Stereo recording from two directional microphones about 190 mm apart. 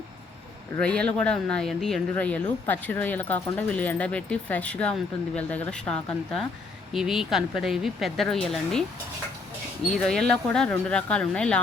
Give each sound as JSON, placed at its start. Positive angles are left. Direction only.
{"t": 0.8, "sound": "speech", "side_deg": 5}
{"t": 9.8, "sound": "speech", "side_deg": 5}